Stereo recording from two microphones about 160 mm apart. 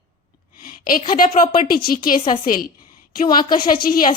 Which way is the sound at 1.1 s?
60° left (ahead or behind).